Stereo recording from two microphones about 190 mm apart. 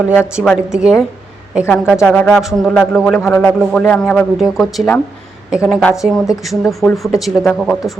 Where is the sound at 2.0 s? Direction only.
5° left (ahead or behind).